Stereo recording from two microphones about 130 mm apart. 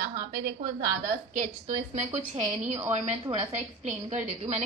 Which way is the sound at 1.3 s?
70° right (ahead or behind).